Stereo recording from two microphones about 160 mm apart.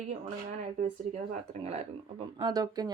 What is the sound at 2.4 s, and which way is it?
Speech, 25° right (ahead or behind).